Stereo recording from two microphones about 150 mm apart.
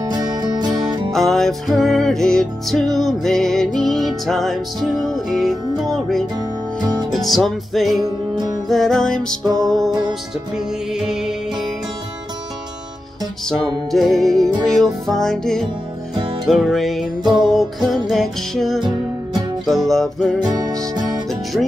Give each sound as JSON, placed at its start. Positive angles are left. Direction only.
{"t": 0.1, "sound": "music", "side_deg": -25}
{"t": 1.1, "sound": "music", "side_deg": 0}
{"t": 10.5, "sound": "music", "side_deg": -5}
{"t": 13.9, "sound": "music", "side_deg": 0}
{"t": 20.4, "sound": "music", "side_deg": -25}
{"t": 21.5, "sound": "music", "side_deg": -5}